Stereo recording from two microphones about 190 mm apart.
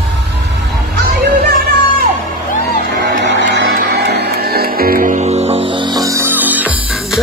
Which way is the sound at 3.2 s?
60° right (ahead or behind).